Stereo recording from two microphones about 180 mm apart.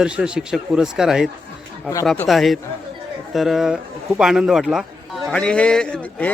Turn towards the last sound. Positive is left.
turn(degrees=10)  # may be behind; listen again after turning